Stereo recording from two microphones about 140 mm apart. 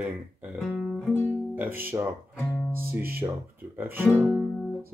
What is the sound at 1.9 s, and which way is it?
Speech, 25° right (ahead or behind).